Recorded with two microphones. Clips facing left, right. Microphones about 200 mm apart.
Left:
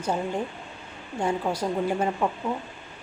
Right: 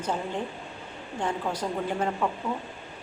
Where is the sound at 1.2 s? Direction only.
10° left (ahead or behind).